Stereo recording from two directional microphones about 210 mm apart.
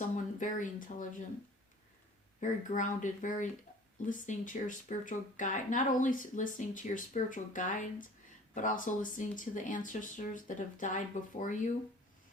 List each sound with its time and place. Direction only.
0.3 s speech: 40° left (ahead or behind)
2.4 s speech: 35° left (ahead or behind)